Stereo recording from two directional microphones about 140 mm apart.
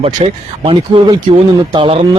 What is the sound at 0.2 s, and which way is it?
A man's voice, 40° right (ahead or behind).